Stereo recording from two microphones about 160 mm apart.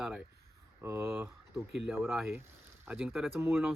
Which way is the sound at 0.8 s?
15° right (ahead or behind).